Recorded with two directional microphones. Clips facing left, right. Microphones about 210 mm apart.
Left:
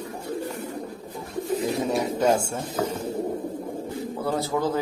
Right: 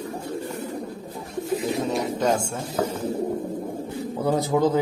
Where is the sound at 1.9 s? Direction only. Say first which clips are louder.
Left 3 dB; 10° left (ahead or behind).